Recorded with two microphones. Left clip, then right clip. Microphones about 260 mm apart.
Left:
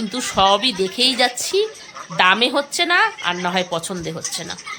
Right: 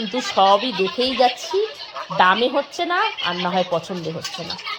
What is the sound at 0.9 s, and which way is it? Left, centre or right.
Speech, centre.